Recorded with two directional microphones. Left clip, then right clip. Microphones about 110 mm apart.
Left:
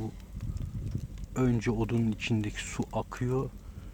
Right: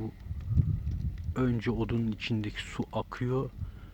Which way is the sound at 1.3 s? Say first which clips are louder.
Left 1 dB; centre (ahead or behind).